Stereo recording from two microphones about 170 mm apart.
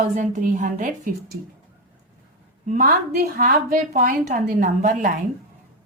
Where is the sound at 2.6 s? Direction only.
55° right (ahead or behind).